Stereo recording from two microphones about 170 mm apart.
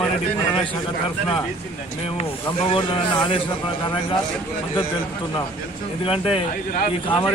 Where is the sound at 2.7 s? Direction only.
30° left (ahead or behind).